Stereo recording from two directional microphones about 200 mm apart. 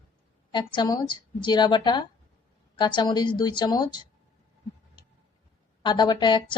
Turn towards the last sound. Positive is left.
turn(degrees=20)  # may be behind; listen again after turning